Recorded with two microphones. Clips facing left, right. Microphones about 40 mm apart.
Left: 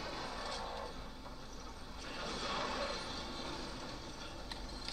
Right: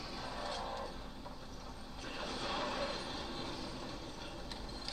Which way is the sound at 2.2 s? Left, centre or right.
Right.